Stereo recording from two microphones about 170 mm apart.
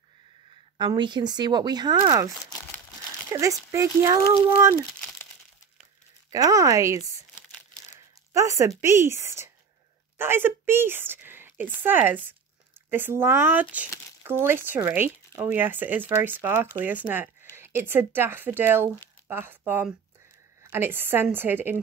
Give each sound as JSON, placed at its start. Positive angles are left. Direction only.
{"t": 0.7, "sound": "speech", "side_deg": -25}
{"t": 3.3, "sound": "speech", "side_deg": -20}
{"t": 6.3, "sound": "speech", "side_deg": -20}
{"t": 8.3, "sound": "a woman's voice", "side_deg": -15}